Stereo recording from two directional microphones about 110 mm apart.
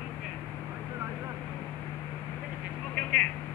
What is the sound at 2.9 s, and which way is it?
Telephone, 10° left (ahead or behind).